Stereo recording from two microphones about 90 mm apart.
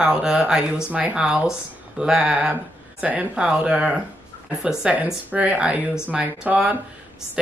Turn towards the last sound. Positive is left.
turn(degrees=-10)  # may be behind; listen again after turning